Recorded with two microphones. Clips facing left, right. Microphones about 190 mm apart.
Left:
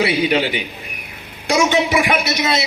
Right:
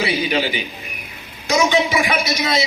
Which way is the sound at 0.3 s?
60° left (ahead or behind).